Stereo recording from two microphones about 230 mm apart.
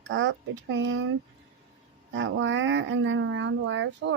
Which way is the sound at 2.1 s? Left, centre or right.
Right.